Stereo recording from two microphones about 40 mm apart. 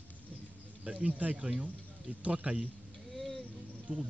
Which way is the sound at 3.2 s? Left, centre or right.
Centre.